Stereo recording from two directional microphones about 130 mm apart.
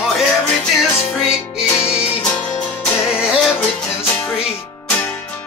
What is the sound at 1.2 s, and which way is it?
Music, 5° right (ahead or behind).